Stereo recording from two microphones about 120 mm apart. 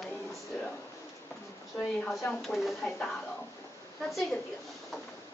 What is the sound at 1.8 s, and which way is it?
Speech, 5° left (ahead or behind).